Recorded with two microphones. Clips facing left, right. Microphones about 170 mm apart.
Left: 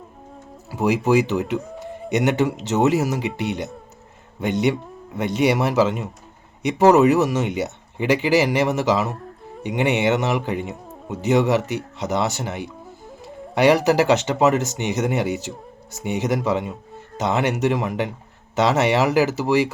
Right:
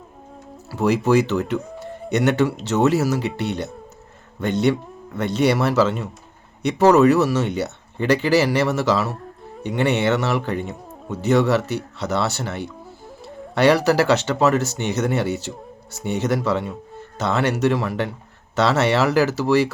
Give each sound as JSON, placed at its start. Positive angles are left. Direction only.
{"t": 0.7, "sound": "speech", "side_deg": 15}